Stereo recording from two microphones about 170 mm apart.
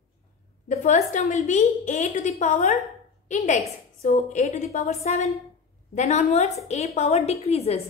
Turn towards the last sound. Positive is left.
turn(degrees=35)  # may be behind; listen again after turning